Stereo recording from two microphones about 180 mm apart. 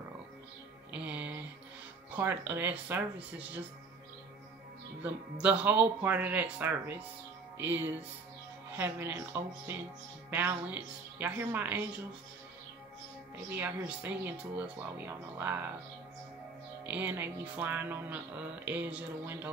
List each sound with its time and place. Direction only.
0.9 s music: 5° right (ahead or behind)
2.1 s speech: 10° right (ahead or behind)
5.0 s speech: 5° right (ahead or behind)
13.5 s speech: 10° right (ahead or behind)
16.8 s speech: 10° right (ahead or behind)